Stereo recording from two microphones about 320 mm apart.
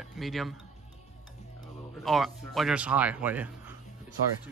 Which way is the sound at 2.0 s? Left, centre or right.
Centre.